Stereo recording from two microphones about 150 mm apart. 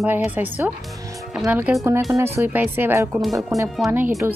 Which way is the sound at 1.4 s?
10° right (ahead or behind).